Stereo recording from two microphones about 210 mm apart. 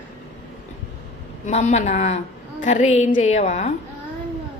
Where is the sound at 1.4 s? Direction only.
35° left (ahead or behind).